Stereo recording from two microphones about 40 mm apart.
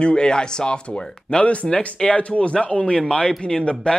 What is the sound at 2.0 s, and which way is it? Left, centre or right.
Speech, left.